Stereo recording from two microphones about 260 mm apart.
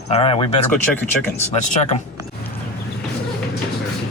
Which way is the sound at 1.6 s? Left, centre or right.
Left.